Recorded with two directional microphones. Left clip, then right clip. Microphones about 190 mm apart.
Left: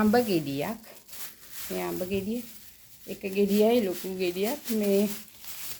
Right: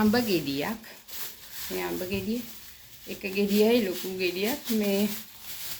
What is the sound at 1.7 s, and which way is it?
Speech, 50° left (ahead or behind).